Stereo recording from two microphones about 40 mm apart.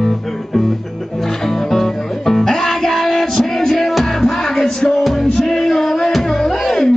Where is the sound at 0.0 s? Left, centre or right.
Centre.